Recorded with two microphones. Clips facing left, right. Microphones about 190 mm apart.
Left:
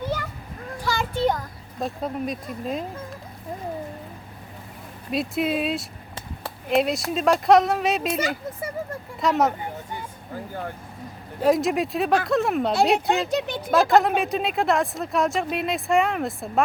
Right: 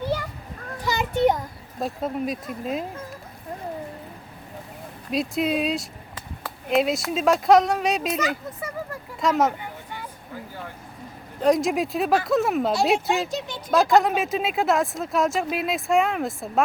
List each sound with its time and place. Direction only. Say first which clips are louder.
0.9 s a sound: right 3 dB; 20° right (ahead or behind)
1.8 s speech: right 1 dB; centre (ahead or behind)
5.1 s speech: even; centre (ahead or behind)
10.3 s speech: left 5 dB; 50° left (ahead or behind)
11.3 s speech: even; 5° left (ahead or behind)